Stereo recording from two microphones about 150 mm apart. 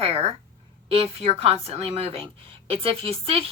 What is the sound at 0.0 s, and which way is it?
A woman's voice, 40° right (ahead or behind).